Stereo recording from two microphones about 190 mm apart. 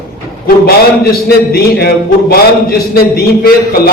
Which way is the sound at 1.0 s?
55° left (ahead or behind).